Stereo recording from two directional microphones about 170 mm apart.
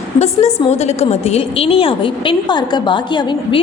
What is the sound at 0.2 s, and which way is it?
A woman's voice, 40° left (ahead or behind).